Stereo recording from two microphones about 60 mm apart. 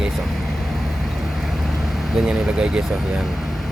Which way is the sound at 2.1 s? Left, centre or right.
Centre.